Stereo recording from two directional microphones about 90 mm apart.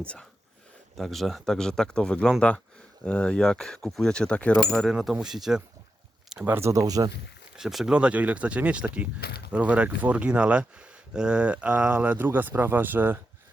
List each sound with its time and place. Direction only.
0.0 s speech: 15° left (ahead or behind)
0.9 s speech: centre (ahead or behind)
4.9 s speech: 10° right (ahead or behind)
6.4 s speech: 25° right (ahead or behind); by 7.1 s 45° right (ahead or behind)
7.5 s speech: 5° right (ahead or behind); by 13.1 s 20° right (ahead or behind)